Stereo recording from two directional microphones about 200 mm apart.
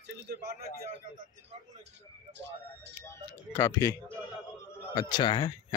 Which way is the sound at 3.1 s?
15° left (ahead or behind).